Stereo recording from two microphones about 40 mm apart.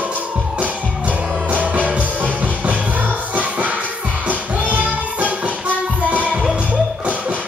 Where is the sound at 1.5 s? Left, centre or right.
Right.